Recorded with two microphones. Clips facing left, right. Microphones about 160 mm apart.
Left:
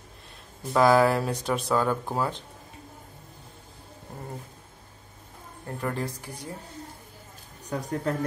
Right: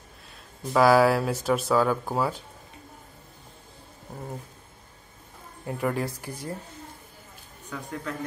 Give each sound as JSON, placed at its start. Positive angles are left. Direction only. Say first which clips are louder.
{"t": 0.7, "sound": "speech", "louder": "right 1 dB", "side_deg": -5}
{"t": 5.7, "sound": "speech", "louder": "right 3 dB", "side_deg": -10}
{"t": 7.6, "sound": "speech", "louder": "left 6 dB", "side_deg": 40}